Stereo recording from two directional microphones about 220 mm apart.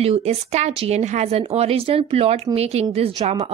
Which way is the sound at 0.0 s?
30° right (ahead or behind).